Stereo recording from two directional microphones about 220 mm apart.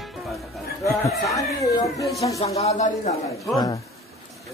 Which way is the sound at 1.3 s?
15° left (ahead or behind).